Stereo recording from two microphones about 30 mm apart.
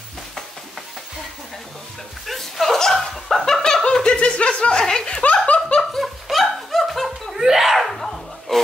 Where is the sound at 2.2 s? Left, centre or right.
Centre.